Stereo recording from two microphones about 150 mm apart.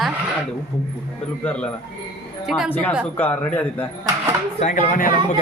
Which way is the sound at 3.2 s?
10° left (ahead or behind).